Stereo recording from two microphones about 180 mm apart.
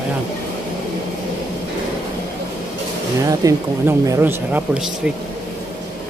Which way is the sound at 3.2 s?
20° right (ahead or behind).